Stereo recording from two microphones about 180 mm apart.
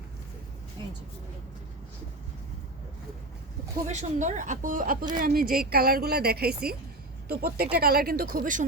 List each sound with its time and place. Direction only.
3.8 s a woman's voice: 40° right (ahead or behind)